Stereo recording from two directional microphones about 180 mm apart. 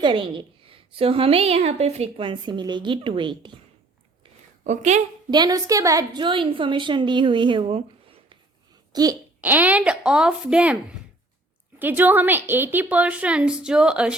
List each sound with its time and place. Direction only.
0.0 s a woman's voice: 25° right (ahead or behind)
4.6 s a woman's voice: 40° right (ahead or behind)
5.3 s a woman's voice: 20° right (ahead or behind)
8.9 s a sound: 20° right (ahead or behind)
9.4 s speech: 10° right (ahead or behind)
11.8 s a woman's voice: 10° right (ahead or behind)